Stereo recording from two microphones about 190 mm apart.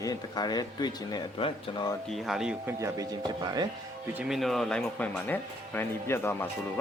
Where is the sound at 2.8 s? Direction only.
20° right (ahead or behind).